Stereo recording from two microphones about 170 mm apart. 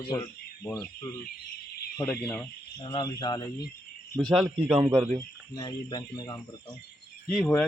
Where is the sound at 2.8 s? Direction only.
25° left (ahead or behind).